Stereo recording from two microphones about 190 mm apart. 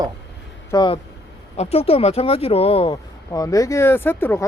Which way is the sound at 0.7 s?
25° left (ahead or behind).